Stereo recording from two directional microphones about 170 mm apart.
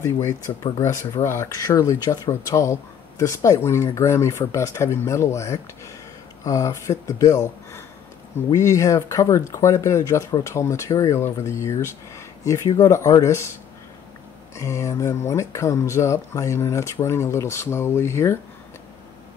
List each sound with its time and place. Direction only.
0.0 s speech: 15° left (ahead or behind)
14.5 s speech: 15° left (ahead or behind)